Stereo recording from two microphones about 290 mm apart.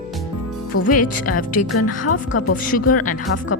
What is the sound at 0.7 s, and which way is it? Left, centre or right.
Speech, left.